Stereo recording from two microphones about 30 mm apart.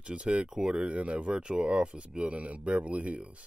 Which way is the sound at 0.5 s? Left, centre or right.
Right.